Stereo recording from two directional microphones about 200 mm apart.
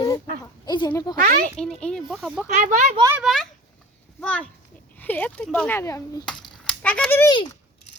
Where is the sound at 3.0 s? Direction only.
15° right (ahead or behind).